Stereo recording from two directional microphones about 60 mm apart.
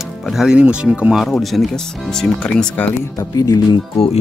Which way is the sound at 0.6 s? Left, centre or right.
Centre.